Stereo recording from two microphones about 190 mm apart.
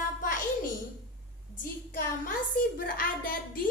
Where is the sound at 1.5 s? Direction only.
45° left (ahead or behind).